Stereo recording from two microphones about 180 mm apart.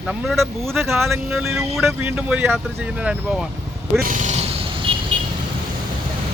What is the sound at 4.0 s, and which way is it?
Vehicle, 45° right (ahead or behind).